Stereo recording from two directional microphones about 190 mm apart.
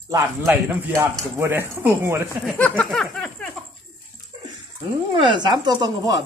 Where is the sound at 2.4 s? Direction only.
10° left (ahead or behind).